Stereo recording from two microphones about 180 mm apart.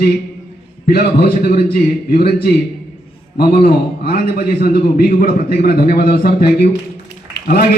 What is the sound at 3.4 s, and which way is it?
A man's voice, 60° left (ahead or behind).